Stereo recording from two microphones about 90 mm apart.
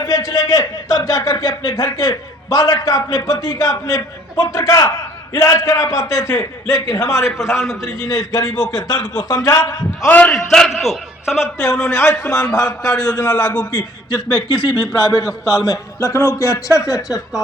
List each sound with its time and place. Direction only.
0.1 s a man's voice: 45° left (ahead or behind)
10.1 s a man's voice: 15° left (ahead or behind)
10.3 s a man's voice: 5° left (ahead or behind)
11.5 s a man's voice: 35° left (ahead or behind)
13.3 s a man's voice: 15° left (ahead or behind)
13.7 s a man's voice: 55° left (ahead or behind)
14.9 s a man's voice: 35° left (ahead or behind)